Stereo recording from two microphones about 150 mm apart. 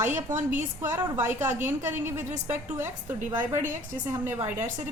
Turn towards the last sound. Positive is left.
turn(degrees=-15)  # may be behind; listen again after turning